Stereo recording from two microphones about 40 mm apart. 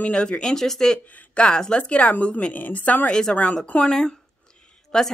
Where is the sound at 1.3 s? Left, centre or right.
Left.